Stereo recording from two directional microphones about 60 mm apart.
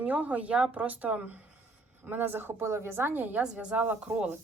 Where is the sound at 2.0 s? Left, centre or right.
Right.